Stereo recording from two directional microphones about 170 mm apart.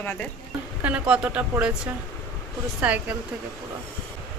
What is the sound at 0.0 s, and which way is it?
Speech, 10° left (ahead or behind).